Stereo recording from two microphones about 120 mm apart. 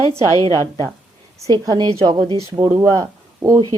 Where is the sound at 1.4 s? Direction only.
30° right (ahead or behind).